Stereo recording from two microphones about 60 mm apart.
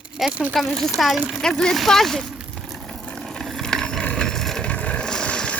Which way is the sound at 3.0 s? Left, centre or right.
Centre.